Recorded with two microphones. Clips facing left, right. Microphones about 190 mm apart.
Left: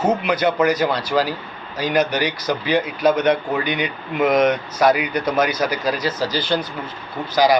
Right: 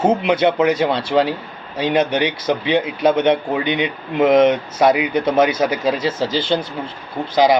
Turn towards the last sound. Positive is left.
turn(degrees=-25)  # may be behind; listen again after turning